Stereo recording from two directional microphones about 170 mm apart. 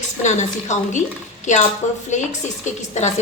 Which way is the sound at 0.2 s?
45° left (ahead or behind).